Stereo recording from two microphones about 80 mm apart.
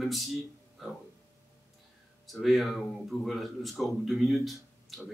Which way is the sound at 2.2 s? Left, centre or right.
Centre.